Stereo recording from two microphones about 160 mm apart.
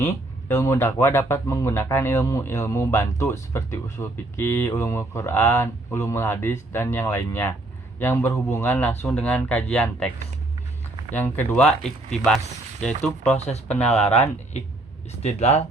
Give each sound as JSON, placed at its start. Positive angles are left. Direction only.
{"t": 0.0, "sound": "speech", "side_deg": 15}
{"t": 11.1, "sound": "speech", "side_deg": 10}
{"t": 13.8, "sound": "speech", "side_deg": 40}